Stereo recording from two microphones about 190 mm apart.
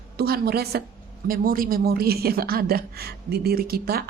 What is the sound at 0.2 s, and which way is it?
A woman's voice, 55° right (ahead or behind).